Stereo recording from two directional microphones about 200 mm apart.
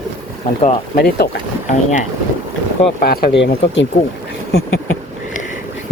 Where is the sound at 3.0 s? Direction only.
50° left (ahead or behind).